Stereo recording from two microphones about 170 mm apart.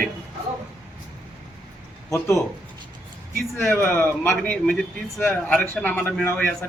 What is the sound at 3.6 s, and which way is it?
A man's voice, 10° left (ahead or behind).